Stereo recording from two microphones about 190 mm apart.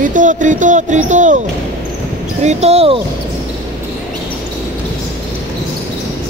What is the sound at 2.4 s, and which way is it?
Speech, 35° right (ahead or behind).